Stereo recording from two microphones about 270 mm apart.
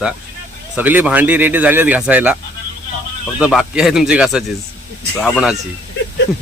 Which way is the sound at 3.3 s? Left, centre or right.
Centre.